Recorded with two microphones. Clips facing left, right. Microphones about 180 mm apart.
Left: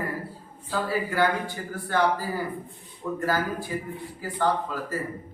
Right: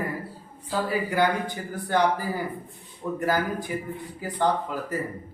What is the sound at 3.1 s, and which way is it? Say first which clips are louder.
A woman's voice: right 1 dB; 15° right (ahead or behind).